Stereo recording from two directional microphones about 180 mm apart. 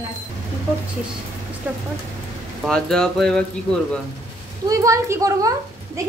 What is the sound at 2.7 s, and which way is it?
Speech, 5° left (ahead or behind).